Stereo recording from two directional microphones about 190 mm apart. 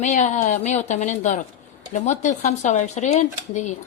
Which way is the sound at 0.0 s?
40° left (ahead or behind).